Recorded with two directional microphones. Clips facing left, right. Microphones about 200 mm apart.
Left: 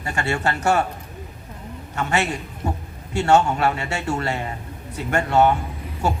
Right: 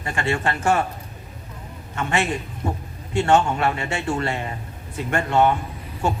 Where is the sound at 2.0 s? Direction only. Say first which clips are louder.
Even; 40° left (ahead or behind).